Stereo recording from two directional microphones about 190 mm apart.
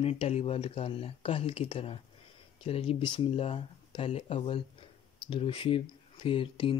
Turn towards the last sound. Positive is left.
turn(degrees=30)  # may be behind; listen again after turning